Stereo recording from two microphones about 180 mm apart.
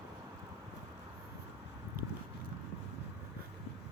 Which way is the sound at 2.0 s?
55° right (ahead or behind).